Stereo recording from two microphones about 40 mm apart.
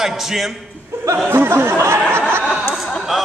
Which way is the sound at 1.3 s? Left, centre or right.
Right.